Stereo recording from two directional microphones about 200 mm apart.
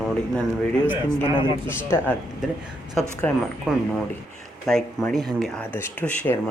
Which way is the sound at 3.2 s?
5° left (ahead or behind).